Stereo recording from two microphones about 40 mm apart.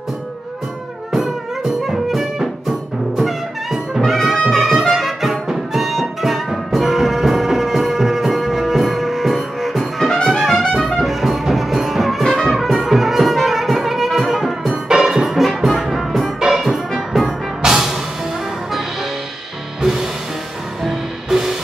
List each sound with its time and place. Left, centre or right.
1.8 s music: centre
10.2 s trumpet: centre
10.7 s music: centre
19.8 s music: centre